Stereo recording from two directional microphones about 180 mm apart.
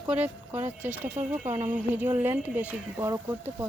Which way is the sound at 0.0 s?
10° right (ahead or behind).